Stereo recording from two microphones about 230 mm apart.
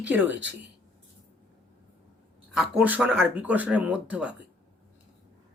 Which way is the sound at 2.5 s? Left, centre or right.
Centre.